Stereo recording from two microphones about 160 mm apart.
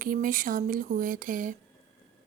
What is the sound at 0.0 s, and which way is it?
Speech, 60° right (ahead or behind).